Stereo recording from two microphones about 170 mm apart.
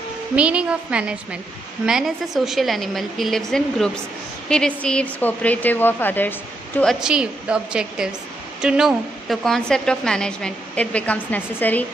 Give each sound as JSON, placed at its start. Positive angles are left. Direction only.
{"t": 0.4, "sound": "a woman's voice", "side_deg": -5}
{"t": 6.8, "sound": "a woman's voice", "side_deg": 0}